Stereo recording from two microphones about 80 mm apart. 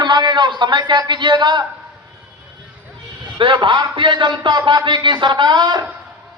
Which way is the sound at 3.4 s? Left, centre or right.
Right.